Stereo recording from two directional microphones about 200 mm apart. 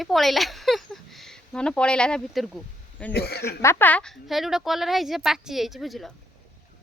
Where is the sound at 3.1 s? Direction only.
55° left (ahead or behind).